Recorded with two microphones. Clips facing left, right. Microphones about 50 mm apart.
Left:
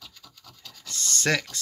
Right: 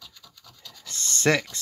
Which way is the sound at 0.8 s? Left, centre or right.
Right.